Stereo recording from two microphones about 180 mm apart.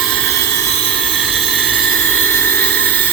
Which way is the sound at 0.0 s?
5° left (ahead or behind).